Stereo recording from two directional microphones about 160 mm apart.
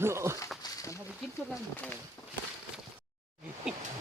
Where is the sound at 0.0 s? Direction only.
15° right (ahead or behind).